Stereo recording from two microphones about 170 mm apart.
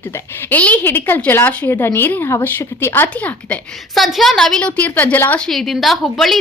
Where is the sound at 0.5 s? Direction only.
10° left (ahead or behind).